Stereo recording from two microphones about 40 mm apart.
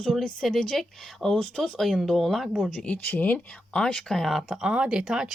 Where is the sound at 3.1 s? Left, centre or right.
Left.